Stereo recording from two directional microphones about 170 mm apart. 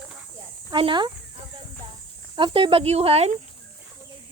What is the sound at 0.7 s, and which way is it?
Speech, 30° right (ahead or behind).